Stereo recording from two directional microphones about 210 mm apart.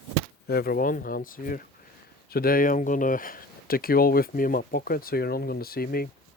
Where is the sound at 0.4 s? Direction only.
45° left (ahead or behind).